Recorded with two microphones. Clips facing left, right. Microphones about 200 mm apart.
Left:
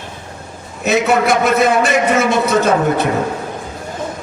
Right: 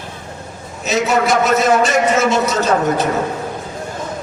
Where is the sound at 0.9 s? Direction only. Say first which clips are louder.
Left 2 dB; 60° left (ahead or behind).